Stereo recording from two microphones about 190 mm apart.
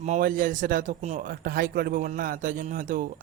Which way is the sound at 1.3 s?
50° right (ahead or behind).